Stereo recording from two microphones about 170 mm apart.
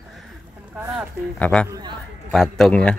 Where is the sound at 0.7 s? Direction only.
10° right (ahead or behind).